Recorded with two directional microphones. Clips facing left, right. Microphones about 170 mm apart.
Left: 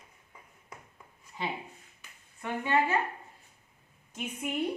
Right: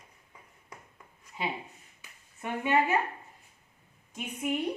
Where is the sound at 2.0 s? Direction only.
15° right (ahead or behind).